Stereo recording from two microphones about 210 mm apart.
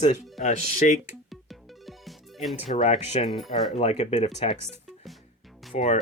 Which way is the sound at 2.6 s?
35° left (ahead or behind).